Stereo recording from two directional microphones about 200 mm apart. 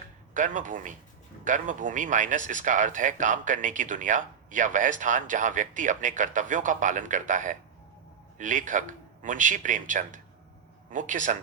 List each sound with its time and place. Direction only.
0.3 s speech: 40° right (ahead or behind)